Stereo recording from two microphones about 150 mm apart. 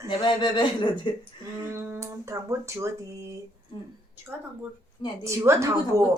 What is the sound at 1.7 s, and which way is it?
Speech, 20° right (ahead or behind).